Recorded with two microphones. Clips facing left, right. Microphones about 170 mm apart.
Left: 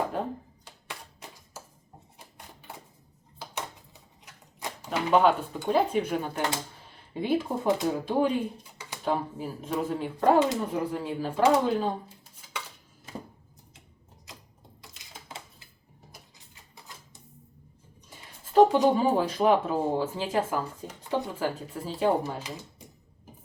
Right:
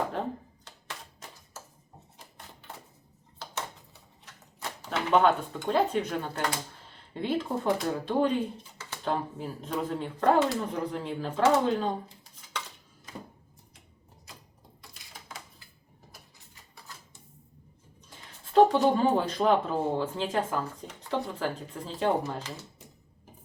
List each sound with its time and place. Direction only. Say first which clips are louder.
0.1 s a sound: left 1 dB; 5° left (ahead or behind)
2.1 s typewriter: even; 10° left (ahead or behind)
3.3 s a sound: left 1 dB; 15° left (ahead or behind)
7.1 s speech: left 2 dB; 10° left (ahead or behind)
14.8 s typewriter: left 1 dB; 20° left (ahead or behind)
16.7 s typewriter: even; 20° left (ahead or behind)
18.1 s speech: even; 10° left (ahead or behind)